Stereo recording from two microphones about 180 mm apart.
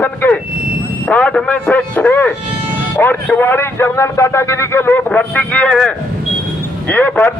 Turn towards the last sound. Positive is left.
turn(degrees=10)  # may be behind; listen again after turning